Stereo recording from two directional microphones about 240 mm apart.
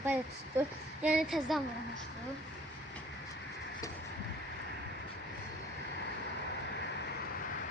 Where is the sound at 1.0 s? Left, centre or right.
Centre.